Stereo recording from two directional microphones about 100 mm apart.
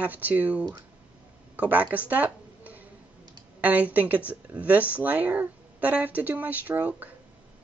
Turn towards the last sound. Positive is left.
turn(degrees=-15)  # may be behind; listen again after turning